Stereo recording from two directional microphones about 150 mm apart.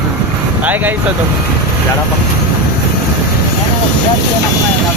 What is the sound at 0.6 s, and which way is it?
Speech, 10° right (ahead or behind).